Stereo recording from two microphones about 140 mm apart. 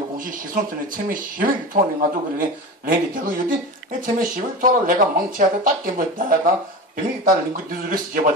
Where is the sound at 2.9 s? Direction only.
80° right.